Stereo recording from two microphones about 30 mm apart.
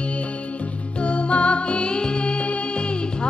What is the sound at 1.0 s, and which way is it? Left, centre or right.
Music, left.